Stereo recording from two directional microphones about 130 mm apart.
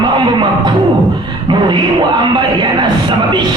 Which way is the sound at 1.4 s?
35° right (ahead or behind).